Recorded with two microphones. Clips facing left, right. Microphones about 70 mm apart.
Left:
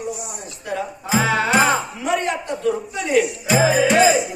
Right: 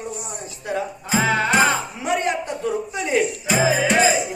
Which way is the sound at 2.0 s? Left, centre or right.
Right.